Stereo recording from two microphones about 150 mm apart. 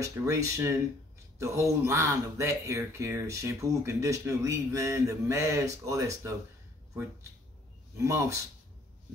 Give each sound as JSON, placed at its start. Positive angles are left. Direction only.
{"t": 0.0, "sound": "speech", "side_deg": -20}
{"t": 8.0, "sound": "speech", "side_deg": -20}